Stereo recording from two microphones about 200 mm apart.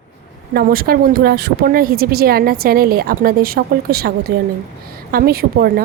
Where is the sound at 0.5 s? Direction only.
50° right (ahead or behind).